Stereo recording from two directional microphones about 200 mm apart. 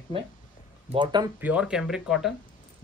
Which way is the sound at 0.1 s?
25° right (ahead or behind).